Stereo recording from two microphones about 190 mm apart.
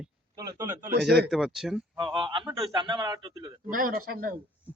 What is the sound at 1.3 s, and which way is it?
Speech, centre (ahead or behind).